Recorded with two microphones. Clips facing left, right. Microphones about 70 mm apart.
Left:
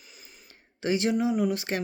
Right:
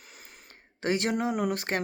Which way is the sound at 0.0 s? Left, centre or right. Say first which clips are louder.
Right 2 dB; right.